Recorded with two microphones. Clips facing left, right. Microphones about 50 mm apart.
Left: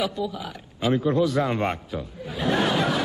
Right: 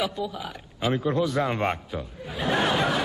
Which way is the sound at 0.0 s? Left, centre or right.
Centre.